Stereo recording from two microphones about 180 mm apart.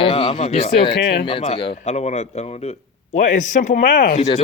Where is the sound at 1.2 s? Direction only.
30° left (ahead or behind).